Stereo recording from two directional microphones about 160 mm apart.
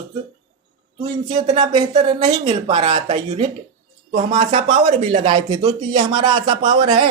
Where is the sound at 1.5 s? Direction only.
45° right (ahead or behind).